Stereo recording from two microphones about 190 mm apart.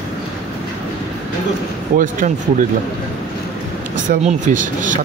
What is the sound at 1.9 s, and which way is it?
Speech, 45° right (ahead or behind).